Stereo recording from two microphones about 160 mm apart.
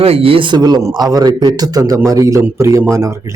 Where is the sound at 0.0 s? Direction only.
35° right (ahead or behind).